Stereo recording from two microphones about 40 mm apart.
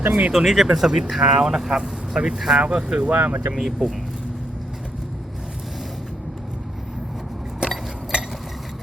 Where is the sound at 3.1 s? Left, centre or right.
Right.